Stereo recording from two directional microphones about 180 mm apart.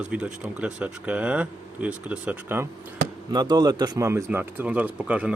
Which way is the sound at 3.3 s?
25° right (ahead or behind).